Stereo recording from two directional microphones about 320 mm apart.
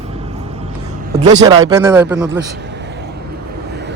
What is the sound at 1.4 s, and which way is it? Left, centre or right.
Speech, centre.